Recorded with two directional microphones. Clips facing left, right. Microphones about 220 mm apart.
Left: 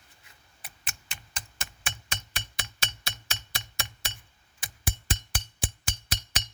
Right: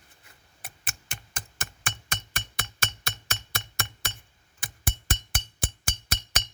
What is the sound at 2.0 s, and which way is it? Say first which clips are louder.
Music: right 2 dB; 50° right (ahead or behind).